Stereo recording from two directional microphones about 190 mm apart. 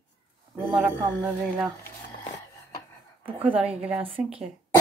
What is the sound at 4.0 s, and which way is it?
Speech, 30° right (ahead or behind).